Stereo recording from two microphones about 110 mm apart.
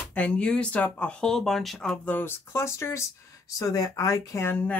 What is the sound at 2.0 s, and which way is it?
Speech, 20° left (ahead or behind).